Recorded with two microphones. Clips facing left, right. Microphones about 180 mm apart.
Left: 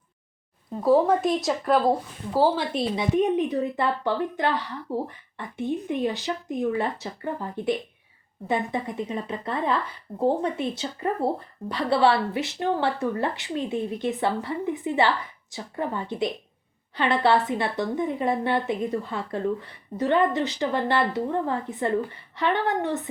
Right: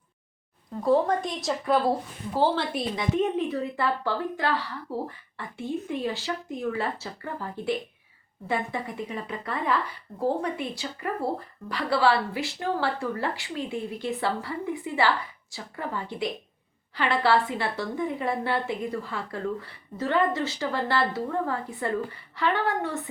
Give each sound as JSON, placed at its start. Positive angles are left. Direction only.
{"t": 0.8, "sound": "speech", "side_deg": 5}
{"t": 1.9, "sound": "a woman's voice", "side_deg": 10}